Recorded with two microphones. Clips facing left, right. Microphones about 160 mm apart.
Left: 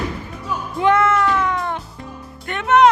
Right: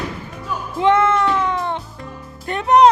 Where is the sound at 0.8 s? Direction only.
25° right (ahead or behind).